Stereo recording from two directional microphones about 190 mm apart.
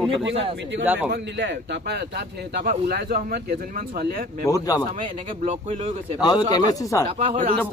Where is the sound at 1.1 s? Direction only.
65° right (ahead or behind).